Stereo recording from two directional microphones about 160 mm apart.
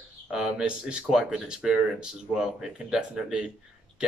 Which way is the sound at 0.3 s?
5° right (ahead or behind).